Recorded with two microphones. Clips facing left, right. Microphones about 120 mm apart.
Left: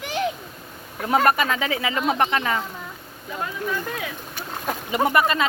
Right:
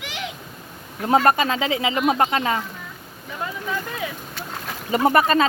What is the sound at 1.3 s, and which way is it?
Speech, 30° right (ahead or behind).